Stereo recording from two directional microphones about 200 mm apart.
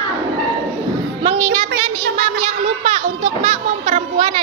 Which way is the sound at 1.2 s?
25° right (ahead or behind).